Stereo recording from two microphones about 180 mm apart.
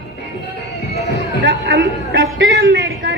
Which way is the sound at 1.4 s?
65° right (ahead or behind).